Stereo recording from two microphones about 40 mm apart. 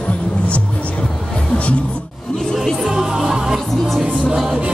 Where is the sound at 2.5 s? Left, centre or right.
Centre.